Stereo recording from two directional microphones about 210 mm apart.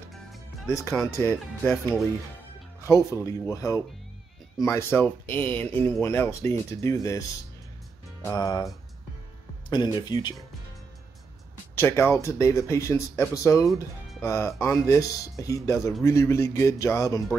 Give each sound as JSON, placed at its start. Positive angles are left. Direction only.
{"t": 0.7, "sound": "speech", "side_deg": 15}
{"t": 2.8, "sound": "speech", "side_deg": 15}
{"t": 9.7, "sound": "speech", "side_deg": 20}
{"t": 11.7, "sound": "speech", "side_deg": 10}